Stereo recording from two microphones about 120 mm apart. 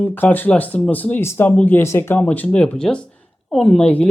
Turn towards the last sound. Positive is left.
turn(degrees=10)  # may be behind; listen again after turning